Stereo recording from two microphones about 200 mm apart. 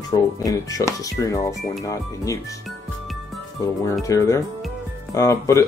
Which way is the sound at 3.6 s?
15° left (ahead or behind).